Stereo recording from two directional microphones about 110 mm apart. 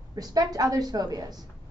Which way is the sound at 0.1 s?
35° right (ahead or behind).